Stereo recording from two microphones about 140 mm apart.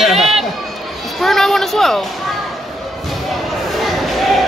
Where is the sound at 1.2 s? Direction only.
Centre (ahead or behind).